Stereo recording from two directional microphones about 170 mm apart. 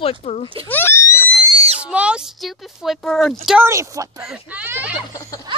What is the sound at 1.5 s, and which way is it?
Screaming, 35° right (ahead or behind).